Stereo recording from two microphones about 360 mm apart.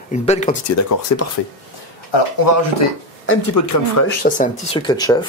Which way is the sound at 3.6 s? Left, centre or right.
Left.